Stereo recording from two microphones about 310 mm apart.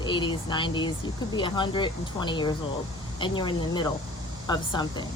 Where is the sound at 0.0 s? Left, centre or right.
Centre.